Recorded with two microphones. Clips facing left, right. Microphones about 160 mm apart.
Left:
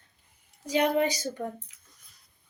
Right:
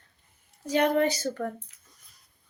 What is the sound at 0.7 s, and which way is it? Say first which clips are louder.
Speech: right 1 dB; 10° left (ahead or behind).